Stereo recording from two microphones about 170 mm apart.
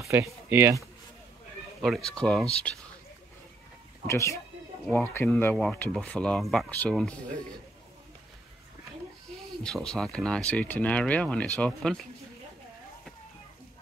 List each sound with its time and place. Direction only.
0.1 s speech: 10° right (ahead or behind)
1.8 s speech: centre (ahead or behind)
4.1 s speech: 15° left (ahead or behind)
9.6 s speech: 5° left (ahead or behind)